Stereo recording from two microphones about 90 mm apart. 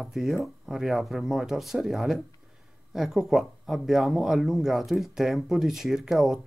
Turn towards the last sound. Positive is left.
turn(degrees=-5)  # may be behind; listen again after turning